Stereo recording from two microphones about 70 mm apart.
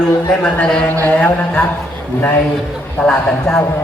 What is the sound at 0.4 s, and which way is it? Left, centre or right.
Speech, centre.